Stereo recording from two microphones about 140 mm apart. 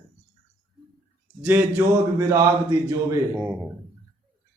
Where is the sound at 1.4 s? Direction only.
15° right (ahead or behind).